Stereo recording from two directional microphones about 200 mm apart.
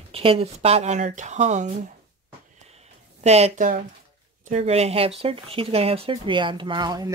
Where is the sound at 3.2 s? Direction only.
35° right (ahead or behind).